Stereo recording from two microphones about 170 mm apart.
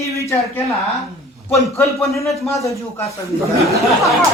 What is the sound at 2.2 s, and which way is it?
Speech, centre (ahead or behind).